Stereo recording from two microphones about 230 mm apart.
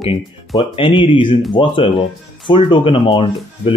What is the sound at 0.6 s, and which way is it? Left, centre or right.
Speech, left.